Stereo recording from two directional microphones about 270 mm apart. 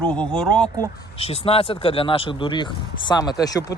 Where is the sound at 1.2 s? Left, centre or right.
Left.